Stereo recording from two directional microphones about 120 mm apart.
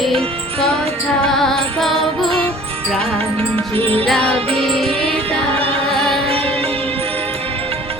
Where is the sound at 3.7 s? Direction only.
50° right (ahead or behind).